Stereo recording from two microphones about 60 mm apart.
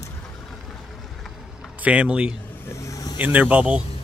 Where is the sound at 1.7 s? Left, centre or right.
Right.